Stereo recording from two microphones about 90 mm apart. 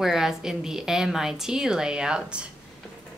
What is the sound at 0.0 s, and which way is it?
A woman's voice, 5° right (ahead or behind).